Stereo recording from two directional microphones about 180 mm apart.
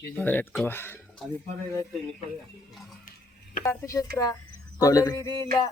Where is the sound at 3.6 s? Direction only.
15° left (ahead or behind).